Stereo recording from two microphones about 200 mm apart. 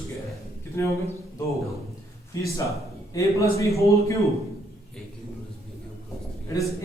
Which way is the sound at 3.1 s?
15° left (ahead or behind).